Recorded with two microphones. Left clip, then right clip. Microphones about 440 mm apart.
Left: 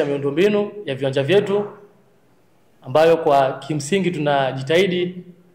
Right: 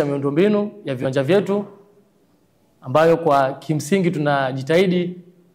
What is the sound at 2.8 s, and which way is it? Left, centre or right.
A man's voice, right.